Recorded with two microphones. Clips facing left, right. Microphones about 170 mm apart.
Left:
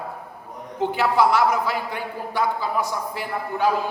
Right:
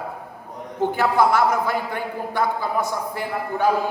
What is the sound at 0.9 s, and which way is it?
A woman's voice, 50° right (ahead or behind).